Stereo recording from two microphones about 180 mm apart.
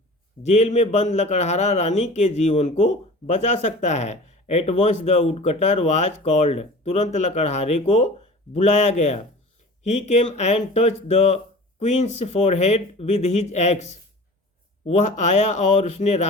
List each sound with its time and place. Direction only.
0.4 s a man's voice: 40° left (ahead or behind)
15.4 s a man's voice: 40° left (ahead or behind)